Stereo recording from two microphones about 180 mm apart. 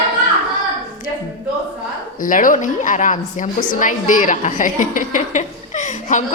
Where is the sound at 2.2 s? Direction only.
50° left (ahead or behind).